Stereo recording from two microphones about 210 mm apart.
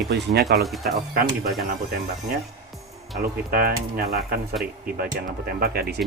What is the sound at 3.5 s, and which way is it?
Speech, 45° right (ahead or behind).